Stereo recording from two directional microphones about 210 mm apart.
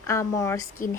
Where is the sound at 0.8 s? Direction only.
40° left (ahead or behind).